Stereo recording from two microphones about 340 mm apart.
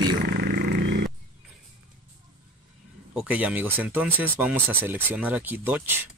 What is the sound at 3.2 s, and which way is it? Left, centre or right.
Speech, centre.